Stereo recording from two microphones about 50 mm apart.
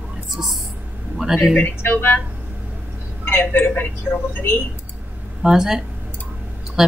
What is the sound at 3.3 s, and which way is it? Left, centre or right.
Speech, left.